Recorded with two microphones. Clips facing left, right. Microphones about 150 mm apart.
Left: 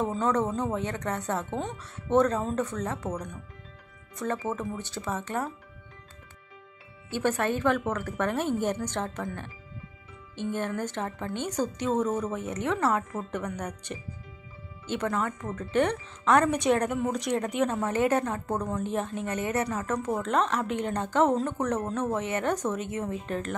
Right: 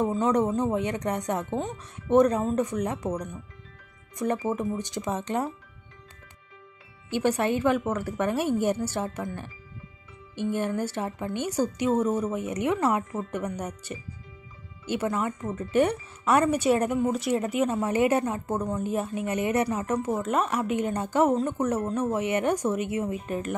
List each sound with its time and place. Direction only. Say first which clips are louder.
0.0 s speech: right 3 dB; 15° right (ahead or behind)
7.1 s speech: right 2 dB; 15° right (ahead or behind)
10.5 s speech: right 3 dB; 10° right (ahead or behind)
15.1 s speech: right 2 dB; 10° right (ahead or behind)